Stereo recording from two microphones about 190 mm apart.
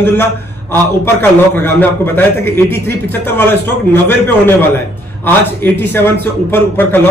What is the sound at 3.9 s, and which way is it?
A man's voice, 10° left (ahead or behind).